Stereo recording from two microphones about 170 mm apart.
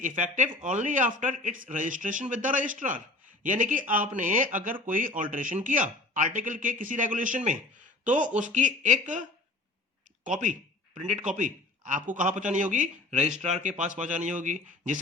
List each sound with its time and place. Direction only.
0.0 s speech: 50° right (ahead or behind)
11.0 s speech: 45° right (ahead or behind)